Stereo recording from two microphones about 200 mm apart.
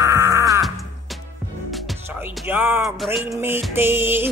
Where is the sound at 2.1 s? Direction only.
10° right (ahead or behind).